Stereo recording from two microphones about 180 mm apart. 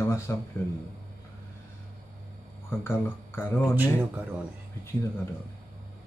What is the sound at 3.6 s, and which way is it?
Speech, 10° right (ahead or behind).